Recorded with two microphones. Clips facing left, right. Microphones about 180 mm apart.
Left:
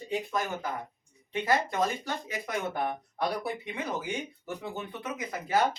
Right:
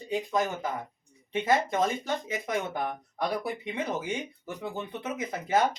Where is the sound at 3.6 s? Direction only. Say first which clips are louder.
Right 2 dB; 20° right (ahead or behind).